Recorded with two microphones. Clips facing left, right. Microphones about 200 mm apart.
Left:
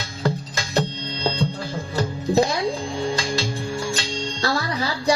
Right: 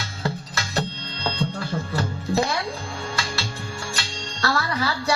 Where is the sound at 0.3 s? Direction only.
15° left (ahead or behind).